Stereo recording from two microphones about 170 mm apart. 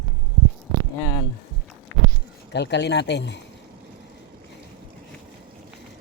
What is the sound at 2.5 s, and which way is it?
Speech, 90° left.